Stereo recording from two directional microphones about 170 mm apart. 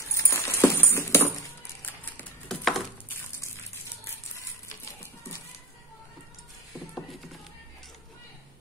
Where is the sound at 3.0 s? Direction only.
15° left (ahead or behind).